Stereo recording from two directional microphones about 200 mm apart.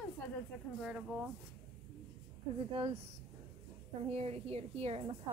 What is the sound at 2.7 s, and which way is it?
Speech, 25° right (ahead or behind).